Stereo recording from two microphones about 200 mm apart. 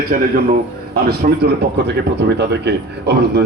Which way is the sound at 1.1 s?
55° right (ahead or behind).